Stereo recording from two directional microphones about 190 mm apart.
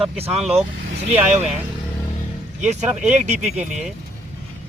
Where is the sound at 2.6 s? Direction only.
40° right (ahead or behind).